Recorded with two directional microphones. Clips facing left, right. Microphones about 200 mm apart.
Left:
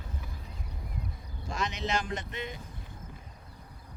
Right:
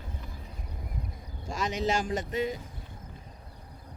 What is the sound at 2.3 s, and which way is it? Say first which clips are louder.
Speech: right 9 dB; 40° right (ahead or behind).